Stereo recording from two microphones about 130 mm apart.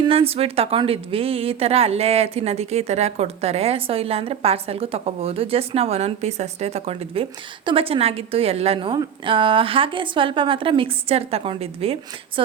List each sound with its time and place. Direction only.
0.0 s a woman's voice: 45° right (ahead or behind)